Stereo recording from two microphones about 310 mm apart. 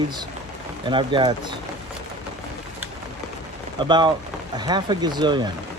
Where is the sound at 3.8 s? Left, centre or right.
Centre.